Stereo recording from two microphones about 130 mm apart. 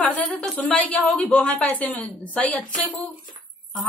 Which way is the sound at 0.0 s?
10° left (ahead or behind).